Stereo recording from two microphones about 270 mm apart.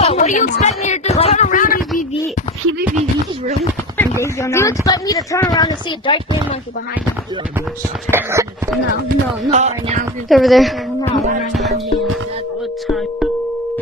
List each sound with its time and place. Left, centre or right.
0.0 s a sound: left
4.0 s speech: centre
8.1 s speech: centre
9.5 s speech: right
10.2 s a woman's voice: centre
12.8 s speech: centre